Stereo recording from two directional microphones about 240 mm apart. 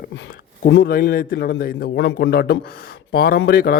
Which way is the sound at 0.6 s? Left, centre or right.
Left.